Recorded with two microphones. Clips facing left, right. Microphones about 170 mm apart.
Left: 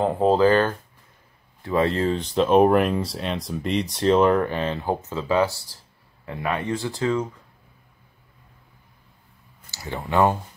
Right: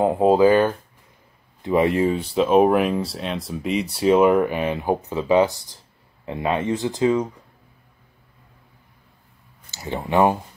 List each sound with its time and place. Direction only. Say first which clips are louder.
0.0 s speech: right 3 dB; 10° right (ahead or behind)
9.7 s speech: right 3 dB; 20° right (ahead or behind)